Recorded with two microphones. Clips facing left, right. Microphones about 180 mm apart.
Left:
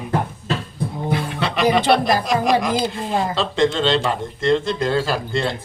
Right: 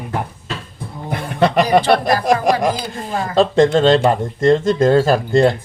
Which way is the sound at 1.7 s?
50° right (ahead or behind).